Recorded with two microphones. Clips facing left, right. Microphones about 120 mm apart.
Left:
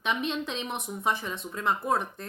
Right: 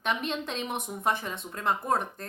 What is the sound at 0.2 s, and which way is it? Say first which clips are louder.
A woman's voice: left 1 dB; 45° right (ahead or behind).